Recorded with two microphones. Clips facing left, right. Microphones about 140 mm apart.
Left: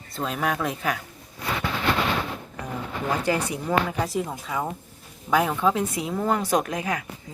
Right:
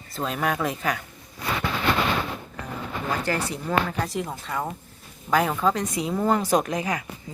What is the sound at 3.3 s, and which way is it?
Speech, 15° left (ahead or behind).